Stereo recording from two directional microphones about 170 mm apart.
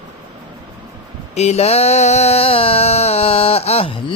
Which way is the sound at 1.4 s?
40° left (ahead or behind).